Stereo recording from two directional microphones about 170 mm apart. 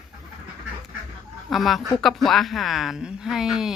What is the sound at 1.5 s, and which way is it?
Speech, centre (ahead or behind).